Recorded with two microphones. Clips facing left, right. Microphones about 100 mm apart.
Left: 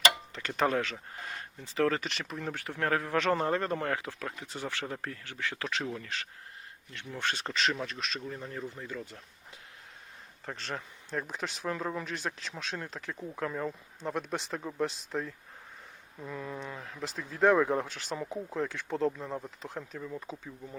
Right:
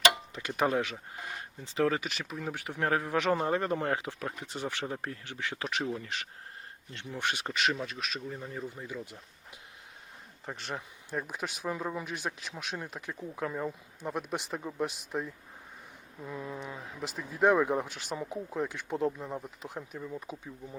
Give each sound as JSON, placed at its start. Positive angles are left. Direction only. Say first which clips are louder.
{"t": 0.3, "sound": "speech", "louder": "even", "side_deg": -15}
{"t": 2.6, "sound": "speech", "louder": "right 1 dB", "side_deg": -15}
{"t": 10.4, "sound": "speech", "louder": "even", "side_deg": -15}